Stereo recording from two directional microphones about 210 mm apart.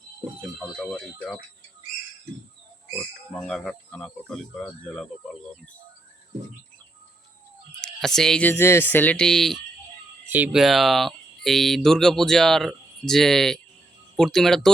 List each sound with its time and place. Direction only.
0.6 s speech: 5° left (ahead or behind)
2.9 s speech: 5° left (ahead or behind)
7.8 s speech: centre (ahead or behind)